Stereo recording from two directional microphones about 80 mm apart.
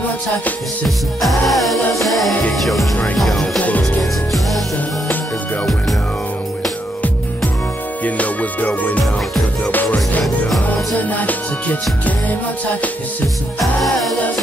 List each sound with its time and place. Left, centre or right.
0.8 s music: centre
3.5 s music: centre
8.0 s music: centre
11.0 s music: centre
13.6 s music: centre